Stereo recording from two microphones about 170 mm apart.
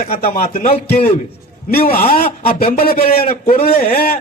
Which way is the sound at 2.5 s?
35° left (ahead or behind).